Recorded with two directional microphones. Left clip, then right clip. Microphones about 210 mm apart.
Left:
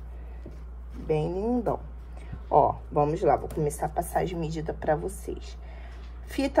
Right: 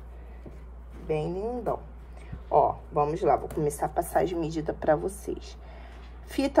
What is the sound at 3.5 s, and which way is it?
A woman's voice, 15° right (ahead or behind).